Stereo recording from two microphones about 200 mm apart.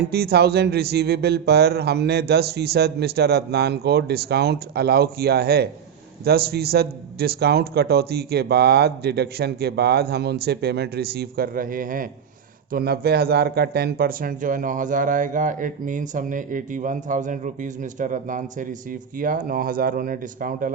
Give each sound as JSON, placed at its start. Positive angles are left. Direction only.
{"t": 0.1, "sound": "a man's voice", "side_deg": -50}